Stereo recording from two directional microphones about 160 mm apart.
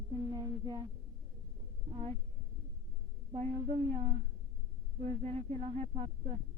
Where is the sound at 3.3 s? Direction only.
40° right (ahead or behind).